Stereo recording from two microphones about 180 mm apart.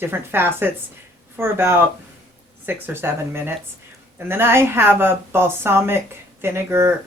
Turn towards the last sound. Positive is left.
turn(degrees=-15)  # may be behind; listen again after turning